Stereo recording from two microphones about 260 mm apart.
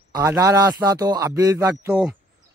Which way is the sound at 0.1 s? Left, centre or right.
Centre.